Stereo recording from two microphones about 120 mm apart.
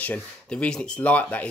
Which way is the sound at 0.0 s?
10° left (ahead or behind).